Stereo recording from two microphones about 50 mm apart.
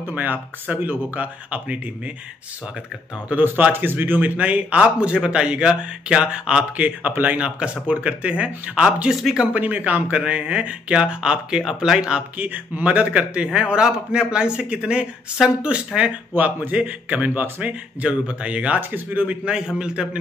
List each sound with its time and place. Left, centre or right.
0.1 s speech: right
3.3 s speech: right; by 6.6 s centre
7.1 s speech: right
7.3 s speech: right
9.1 s a man's voice: centre
9.5 s speech: right; by 12.0 s centre
12.4 s a man's voice: right
16.0 s speech: right
18.8 s speech: right
19.4 s a man's voice: centre